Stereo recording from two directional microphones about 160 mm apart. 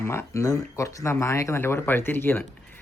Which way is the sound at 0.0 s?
15° left (ahead or behind).